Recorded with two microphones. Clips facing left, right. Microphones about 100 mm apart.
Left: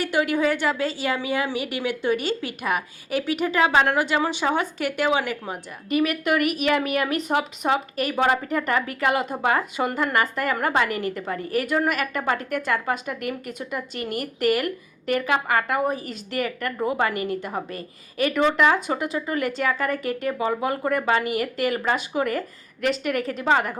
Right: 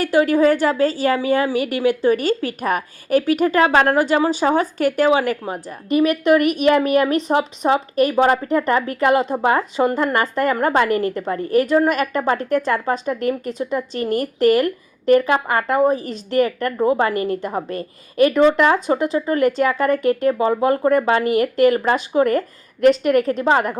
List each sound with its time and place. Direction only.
0.0 s a woman's voice: 40° right (ahead or behind)